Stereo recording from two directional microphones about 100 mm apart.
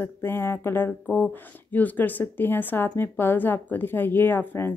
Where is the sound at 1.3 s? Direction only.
15° left (ahead or behind).